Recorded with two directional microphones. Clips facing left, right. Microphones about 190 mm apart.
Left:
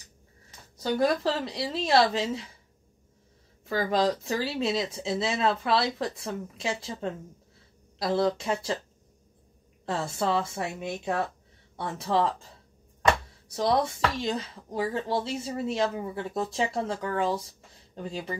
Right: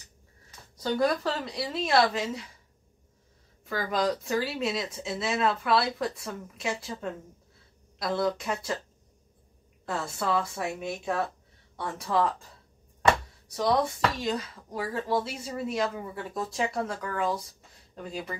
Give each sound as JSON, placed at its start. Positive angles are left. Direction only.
{"t": 0.9, "sound": "speech", "side_deg": 25}
{"t": 3.6, "sound": "speech", "side_deg": 25}
{"t": 9.8, "sound": "speech", "side_deg": 25}
{"t": 14.2, "sound": "speech", "side_deg": 25}